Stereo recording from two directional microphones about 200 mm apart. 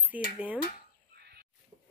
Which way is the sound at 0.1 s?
5° right (ahead or behind).